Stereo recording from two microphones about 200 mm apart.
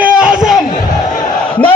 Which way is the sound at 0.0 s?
5° right (ahead or behind).